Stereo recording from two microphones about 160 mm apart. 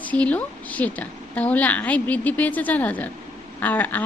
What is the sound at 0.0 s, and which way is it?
A woman's voice, 10° left (ahead or behind).